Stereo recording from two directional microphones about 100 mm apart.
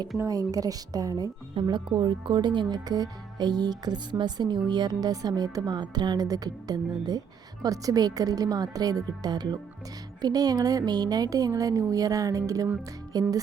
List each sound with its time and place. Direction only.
0.2 s speech: 35° right (ahead or behind)